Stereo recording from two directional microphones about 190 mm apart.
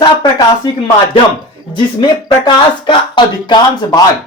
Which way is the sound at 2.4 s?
25° left (ahead or behind).